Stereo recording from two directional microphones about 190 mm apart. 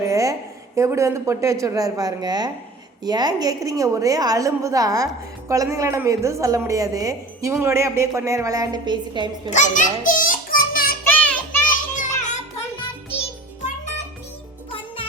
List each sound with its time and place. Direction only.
0.0 s a sound: 15° right (ahead or behind)
0.8 s a woman's voice: 15° right (ahead or behind)
9.5 s music: 40° left (ahead or behind)
11.0 s music: 10° left (ahead or behind)
11.7 s music: 40° left (ahead or behind)